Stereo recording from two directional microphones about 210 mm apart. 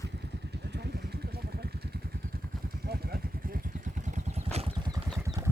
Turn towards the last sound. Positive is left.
turn(degrees=-15)  # may be behind; listen again after turning